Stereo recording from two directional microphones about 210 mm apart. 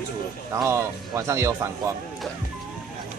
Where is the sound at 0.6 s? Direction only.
15° right (ahead or behind).